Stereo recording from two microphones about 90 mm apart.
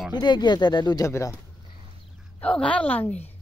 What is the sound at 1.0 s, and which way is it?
Speech, 35° left (ahead or behind).